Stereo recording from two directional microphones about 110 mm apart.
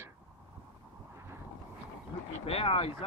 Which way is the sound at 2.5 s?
65° left (ahead or behind).